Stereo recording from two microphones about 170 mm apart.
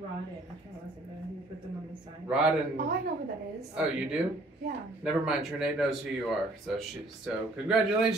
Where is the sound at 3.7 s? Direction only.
5° right (ahead or behind).